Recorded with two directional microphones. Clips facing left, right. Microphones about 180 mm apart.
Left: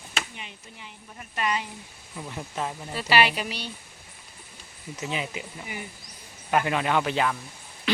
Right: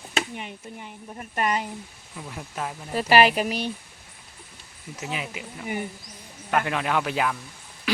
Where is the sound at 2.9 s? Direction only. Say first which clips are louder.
Right 5 dB; 45° right (ahead or behind).